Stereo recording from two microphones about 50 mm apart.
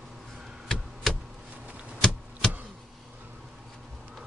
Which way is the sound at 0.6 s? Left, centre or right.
Centre.